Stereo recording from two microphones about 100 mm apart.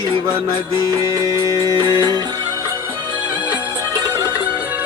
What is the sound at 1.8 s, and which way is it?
Music, 45° right (ahead or behind).